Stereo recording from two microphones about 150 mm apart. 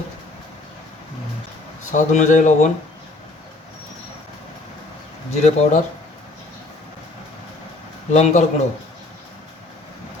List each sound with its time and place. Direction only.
1.8 s speech: 55° left (ahead or behind)
5.3 s speech: 50° left (ahead or behind)
8.1 s speech: 50° left (ahead or behind)